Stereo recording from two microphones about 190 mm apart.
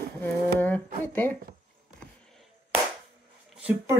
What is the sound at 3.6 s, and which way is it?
Speech, 10° right (ahead or behind).